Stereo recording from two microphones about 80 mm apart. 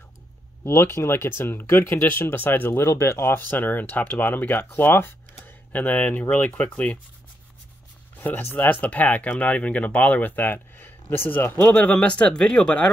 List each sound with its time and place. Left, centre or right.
0.7 s speech: left
8.2 s speech: left